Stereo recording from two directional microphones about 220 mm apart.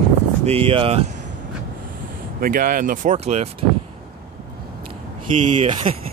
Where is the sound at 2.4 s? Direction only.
40° right (ahead or behind).